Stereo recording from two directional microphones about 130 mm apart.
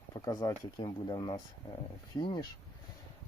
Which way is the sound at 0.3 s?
30° left (ahead or behind).